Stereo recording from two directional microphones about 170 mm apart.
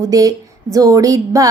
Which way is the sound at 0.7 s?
20° right (ahead or behind).